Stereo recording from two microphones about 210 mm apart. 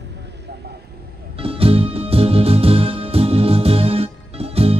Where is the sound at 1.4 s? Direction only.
25° right (ahead or behind).